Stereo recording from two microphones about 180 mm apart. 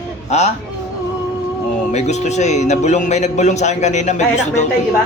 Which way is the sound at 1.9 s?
40° left (ahead or behind).